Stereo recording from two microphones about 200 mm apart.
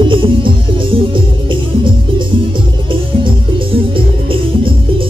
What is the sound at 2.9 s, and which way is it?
Music, 25° right (ahead or behind).